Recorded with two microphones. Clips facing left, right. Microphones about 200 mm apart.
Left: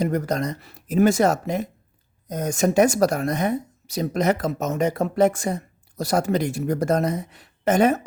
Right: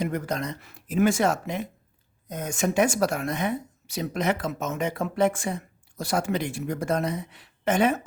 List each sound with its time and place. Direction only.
0.0 s speech: 40° left (ahead or behind)